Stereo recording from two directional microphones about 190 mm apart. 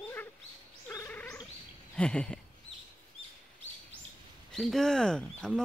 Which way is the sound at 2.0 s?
5° left (ahead or behind).